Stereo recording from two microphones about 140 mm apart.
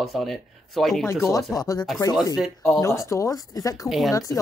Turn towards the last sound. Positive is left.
turn(degrees=0)  # may be behind; listen again after turning